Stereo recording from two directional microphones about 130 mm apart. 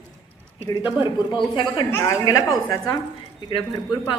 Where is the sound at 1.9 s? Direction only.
20° left (ahead or behind).